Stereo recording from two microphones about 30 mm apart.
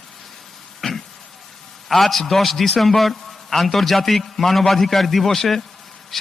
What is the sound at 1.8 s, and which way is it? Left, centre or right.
A man's voice, centre.